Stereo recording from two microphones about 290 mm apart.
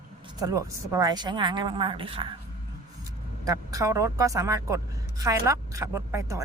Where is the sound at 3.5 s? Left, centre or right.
Centre.